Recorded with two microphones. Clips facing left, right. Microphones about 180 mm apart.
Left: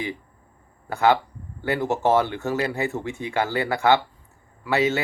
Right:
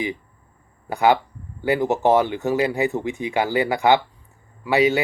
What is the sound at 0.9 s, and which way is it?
Speech, 15° right (ahead or behind).